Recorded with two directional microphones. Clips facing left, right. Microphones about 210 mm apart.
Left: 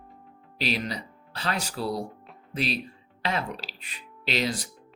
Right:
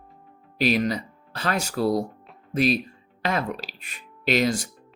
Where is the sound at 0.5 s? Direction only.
50° right (ahead or behind).